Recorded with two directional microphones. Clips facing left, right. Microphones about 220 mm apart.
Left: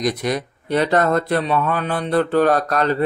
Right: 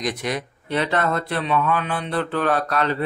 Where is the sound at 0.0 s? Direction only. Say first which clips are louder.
Left 5 dB; 40° left (ahead or behind).